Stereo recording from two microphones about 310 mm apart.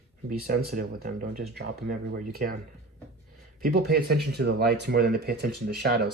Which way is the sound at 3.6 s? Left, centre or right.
Right.